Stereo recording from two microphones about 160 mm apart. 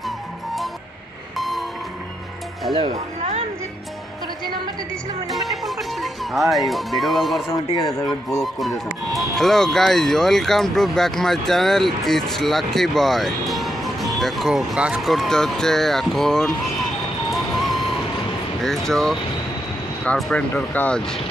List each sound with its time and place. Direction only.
5.3 s music: centre (ahead or behind)
7.5 s speech: 20° left (ahead or behind)
8.4 s speech: centre (ahead or behind)
17.3 s music: centre (ahead or behind)
18.6 s speech: 5° left (ahead or behind)